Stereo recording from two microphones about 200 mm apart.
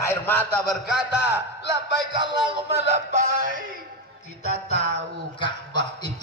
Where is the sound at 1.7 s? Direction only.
25° right (ahead or behind).